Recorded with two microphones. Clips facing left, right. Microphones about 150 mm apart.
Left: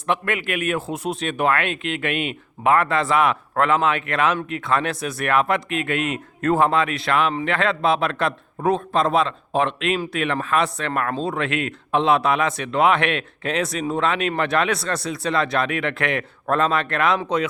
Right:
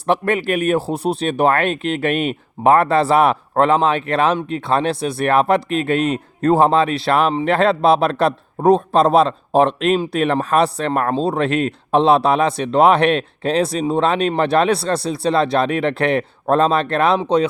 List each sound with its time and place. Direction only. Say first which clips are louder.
0.1 s speech: right 6 dB; 35° right (ahead or behind)